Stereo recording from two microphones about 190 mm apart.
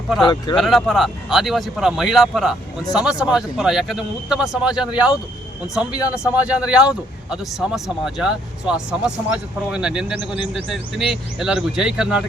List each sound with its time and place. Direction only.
0.2 s speech: 25° left (ahead or behind)
0.5 s speech: centre (ahead or behind)
10.2 s speech: 25° left (ahead or behind)
10.5 s speech: centre (ahead or behind)